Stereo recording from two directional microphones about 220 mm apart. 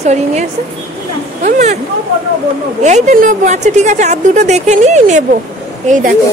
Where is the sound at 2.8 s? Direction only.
35° right (ahead or behind).